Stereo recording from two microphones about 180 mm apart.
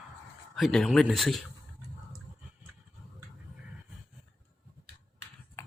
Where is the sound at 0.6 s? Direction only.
Centre (ahead or behind).